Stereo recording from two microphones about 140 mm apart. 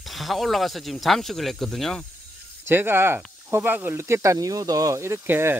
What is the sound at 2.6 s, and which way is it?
Speech, 15° right (ahead or behind).